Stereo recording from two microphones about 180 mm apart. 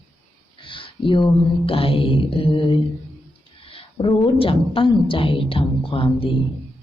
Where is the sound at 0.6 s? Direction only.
30° left (ahead or behind).